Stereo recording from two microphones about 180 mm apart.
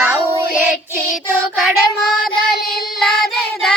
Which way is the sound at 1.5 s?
Centre (ahead or behind).